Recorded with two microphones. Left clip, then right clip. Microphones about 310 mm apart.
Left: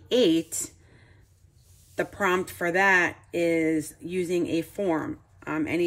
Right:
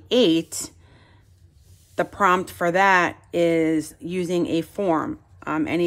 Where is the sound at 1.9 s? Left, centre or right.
Centre.